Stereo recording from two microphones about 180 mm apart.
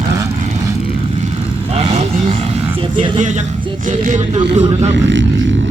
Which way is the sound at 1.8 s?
35° right (ahead or behind).